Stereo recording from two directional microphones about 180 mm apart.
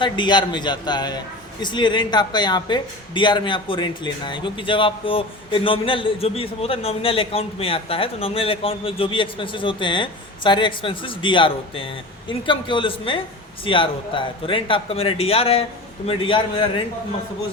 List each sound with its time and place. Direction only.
0.0 s a man's voice: 25° left (ahead or behind)